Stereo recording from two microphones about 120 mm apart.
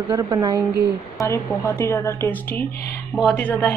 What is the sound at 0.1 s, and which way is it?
Speech, 35° right (ahead or behind).